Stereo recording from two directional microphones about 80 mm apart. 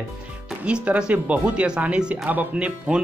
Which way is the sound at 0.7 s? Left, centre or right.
Centre.